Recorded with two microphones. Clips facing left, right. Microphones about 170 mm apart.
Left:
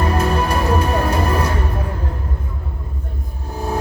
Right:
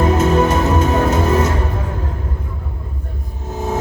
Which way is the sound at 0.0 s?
20° right (ahead or behind).